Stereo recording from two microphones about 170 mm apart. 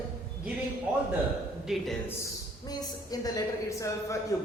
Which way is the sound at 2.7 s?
20° left (ahead or behind).